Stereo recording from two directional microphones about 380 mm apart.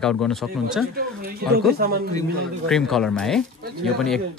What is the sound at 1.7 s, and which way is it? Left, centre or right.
Speech, right.